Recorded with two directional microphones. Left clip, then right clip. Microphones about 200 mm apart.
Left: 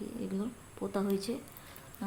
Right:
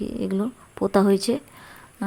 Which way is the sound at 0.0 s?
45° right (ahead or behind).